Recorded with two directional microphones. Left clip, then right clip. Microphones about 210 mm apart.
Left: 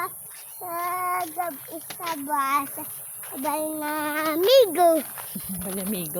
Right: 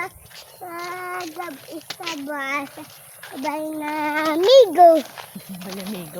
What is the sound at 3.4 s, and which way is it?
Speech, centre (ahead or behind).